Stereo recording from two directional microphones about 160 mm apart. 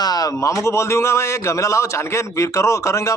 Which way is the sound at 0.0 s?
25° left (ahead or behind).